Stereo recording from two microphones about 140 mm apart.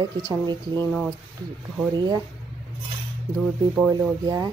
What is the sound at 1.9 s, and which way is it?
Speech, 30° right (ahead or behind).